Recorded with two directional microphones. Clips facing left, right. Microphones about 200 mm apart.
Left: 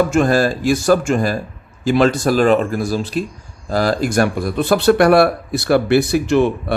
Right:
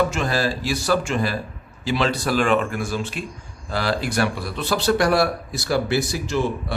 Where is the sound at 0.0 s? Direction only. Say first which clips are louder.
Left 7 dB; 50° left (ahead or behind).